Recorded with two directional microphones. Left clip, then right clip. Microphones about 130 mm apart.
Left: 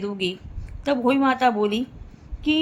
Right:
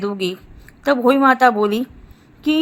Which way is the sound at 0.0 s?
45° right (ahead or behind).